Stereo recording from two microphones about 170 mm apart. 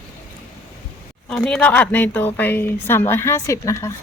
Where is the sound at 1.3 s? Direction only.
Centre (ahead or behind); by 3.9 s 20° left (ahead or behind).